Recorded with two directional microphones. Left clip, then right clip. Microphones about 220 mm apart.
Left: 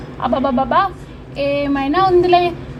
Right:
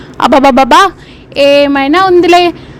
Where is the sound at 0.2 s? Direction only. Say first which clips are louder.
Right 12 dB; 45° right (ahead or behind).